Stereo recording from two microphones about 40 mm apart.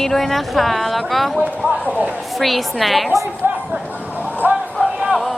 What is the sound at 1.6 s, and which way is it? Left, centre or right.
Speech, right.